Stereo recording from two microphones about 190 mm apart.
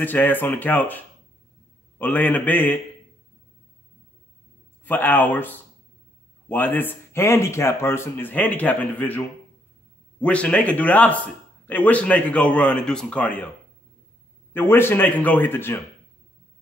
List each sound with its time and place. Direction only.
0.0 s speech: 10° left (ahead or behind)
4.8 s speech: 10° left (ahead or behind)
10.2 s speech: 5° left (ahead or behind)
14.5 s speech: 10° left (ahead or behind)